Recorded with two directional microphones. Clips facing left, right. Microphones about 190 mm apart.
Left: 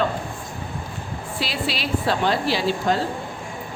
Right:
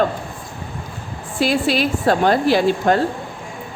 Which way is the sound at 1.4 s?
50° right (ahead or behind).